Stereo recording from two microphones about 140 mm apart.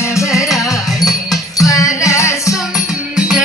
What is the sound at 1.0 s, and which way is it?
Music, 25° left (ahead or behind).